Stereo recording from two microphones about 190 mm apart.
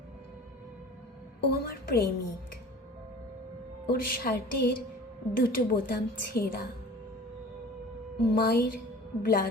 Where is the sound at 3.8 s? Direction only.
50° left (ahead or behind).